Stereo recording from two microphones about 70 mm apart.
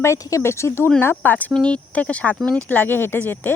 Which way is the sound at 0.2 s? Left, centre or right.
Left.